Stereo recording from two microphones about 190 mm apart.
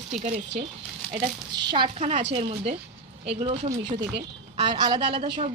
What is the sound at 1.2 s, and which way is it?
A woman's voice, 25° right (ahead or behind).